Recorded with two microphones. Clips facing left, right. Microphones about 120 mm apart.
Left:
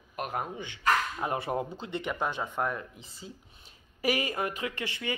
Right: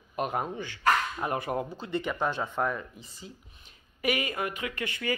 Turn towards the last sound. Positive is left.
turn(degrees=25)  # may be behind; listen again after turning